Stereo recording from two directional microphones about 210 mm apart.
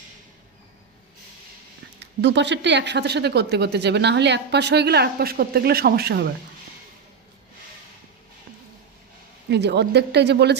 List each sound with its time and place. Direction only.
2.0 s speech: 55° right (ahead or behind)
9.5 s speech: 55° right (ahead or behind)